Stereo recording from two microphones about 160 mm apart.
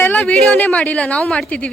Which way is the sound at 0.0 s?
10° left (ahead or behind).